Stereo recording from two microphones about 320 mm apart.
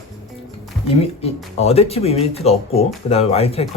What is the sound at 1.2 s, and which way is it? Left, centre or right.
Speech, centre.